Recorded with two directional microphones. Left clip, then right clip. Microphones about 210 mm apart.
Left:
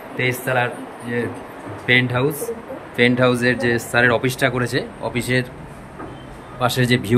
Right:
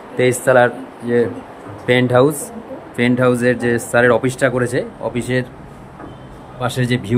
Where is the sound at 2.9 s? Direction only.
15° right (ahead or behind).